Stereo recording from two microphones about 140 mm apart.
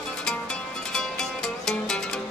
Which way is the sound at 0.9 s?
5° left (ahead or behind).